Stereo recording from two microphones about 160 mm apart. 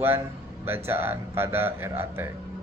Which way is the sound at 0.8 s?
15° right (ahead or behind).